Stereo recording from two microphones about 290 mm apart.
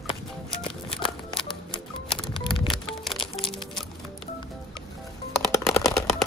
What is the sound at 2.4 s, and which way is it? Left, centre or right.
Music, centre.